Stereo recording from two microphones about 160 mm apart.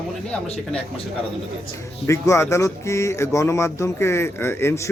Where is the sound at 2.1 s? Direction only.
20° left (ahead or behind).